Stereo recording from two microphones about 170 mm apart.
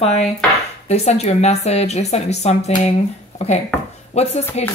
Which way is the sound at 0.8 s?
40° left (ahead or behind).